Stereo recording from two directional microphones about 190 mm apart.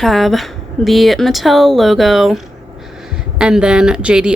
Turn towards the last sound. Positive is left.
turn(degrees=-5)  # may be behind; listen again after turning